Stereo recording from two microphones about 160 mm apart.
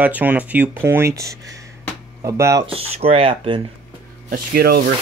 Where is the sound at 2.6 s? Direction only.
35° right (ahead or behind).